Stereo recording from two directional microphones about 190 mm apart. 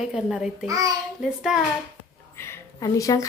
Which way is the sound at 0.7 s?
20° right (ahead or behind).